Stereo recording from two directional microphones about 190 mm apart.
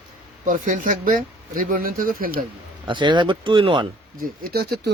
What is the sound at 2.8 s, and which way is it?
Speech, 25° right (ahead or behind).